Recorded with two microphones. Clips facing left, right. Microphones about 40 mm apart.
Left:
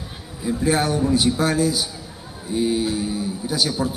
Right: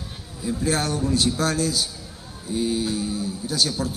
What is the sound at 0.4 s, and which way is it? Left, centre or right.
A man's voice, centre.